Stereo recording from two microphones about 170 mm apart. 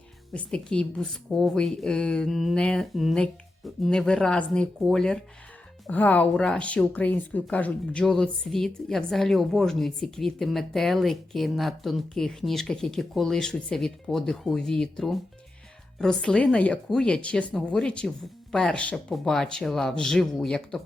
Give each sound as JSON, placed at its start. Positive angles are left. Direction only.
{"t": 0.3, "sound": "speech", "side_deg": 5}